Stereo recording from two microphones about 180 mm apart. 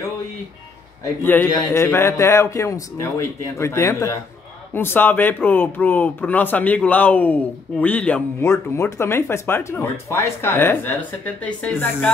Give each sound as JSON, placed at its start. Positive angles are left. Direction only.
{"t": 1.2, "sound": "speech", "side_deg": 10}